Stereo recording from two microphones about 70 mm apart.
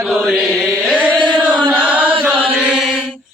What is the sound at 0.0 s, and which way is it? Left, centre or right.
Chant, centre.